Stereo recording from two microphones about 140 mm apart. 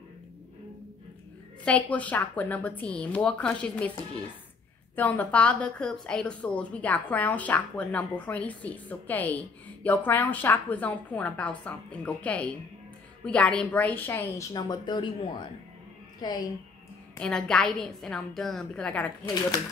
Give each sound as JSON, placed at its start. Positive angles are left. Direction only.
{"t": 1.6, "sound": "a woman's voice", "side_deg": 10}
{"t": 4.9, "sound": "a woman's voice", "side_deg": 10}
{"t": 14.5, "sound": "a woman's voice", "side_deg": 30}
{"t": 17.2, "sound": "a woman's voice", "side_deg": 5}